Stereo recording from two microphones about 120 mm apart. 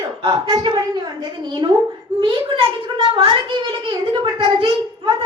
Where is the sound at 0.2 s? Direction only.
55° right (ahead or behind).